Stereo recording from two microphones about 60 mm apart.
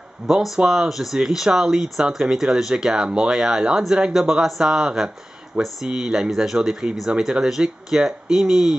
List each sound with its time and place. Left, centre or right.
0.3 s speech: centre